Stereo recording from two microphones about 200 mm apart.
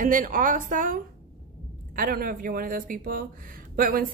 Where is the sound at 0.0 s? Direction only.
40° right (ahead or behind).